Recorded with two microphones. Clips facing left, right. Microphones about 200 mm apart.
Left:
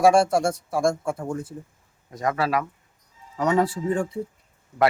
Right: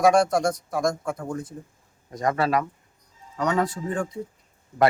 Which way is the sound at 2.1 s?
5° left (ahead or behind).